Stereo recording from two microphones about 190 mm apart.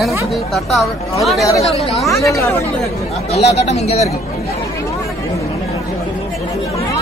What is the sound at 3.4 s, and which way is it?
Speech, 35° left (ahead or behind).